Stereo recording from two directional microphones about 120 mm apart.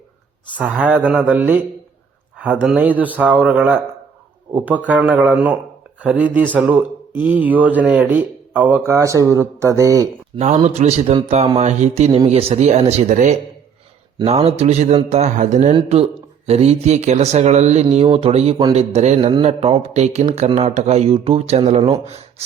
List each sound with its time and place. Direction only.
0.5 s speech: 10° right (ahead or behind); by 10.1 s 30° right (ahead or behind)
10.3 s speech: 75° right (ahead or behind)
11.6 s a man's voice: 70° right (ahead or behind); by 13.3 s 90° right
14.3 s speech: 60° right (ahead or behind)
15.1 s mantra: 75° right (ahead or behind)
15.7 s a man's voice: 55° right (ahead or behind); by 17.8 s 70° right (ahead or behind)
17.9 s speech: 55° right (ahead or behind)